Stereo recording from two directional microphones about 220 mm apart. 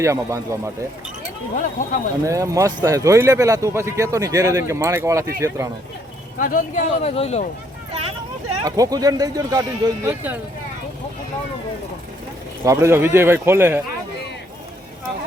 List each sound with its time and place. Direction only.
0.0 s speech: 15° right (ahead or behind)
1.5 s speech: 35° left (ahead or behind)
2.2 s speech: 15° right (ahead or behind)
6.4 s speech: 40° left (ahead or behind)
8.6 s speech: 15° right (ahead or behind)
12.6 s speech: 10° right (ahead or behind)